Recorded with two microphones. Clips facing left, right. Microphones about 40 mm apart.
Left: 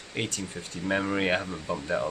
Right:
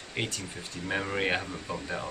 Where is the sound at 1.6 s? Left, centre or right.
Centre.